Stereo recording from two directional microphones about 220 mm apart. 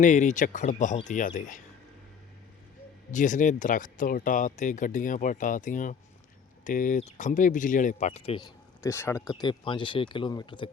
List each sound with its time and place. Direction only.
0.0 s speech: 35° left (ahead or behind)
3.1 s speech: 35° left (ahead or behind)
8.8 s speech: 10° left (ahead or behind)